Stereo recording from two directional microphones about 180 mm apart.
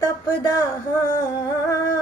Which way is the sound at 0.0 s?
15° left (ahead or behind).